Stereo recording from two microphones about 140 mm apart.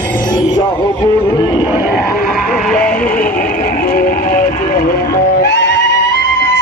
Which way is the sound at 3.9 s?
75° left (ahead or behind).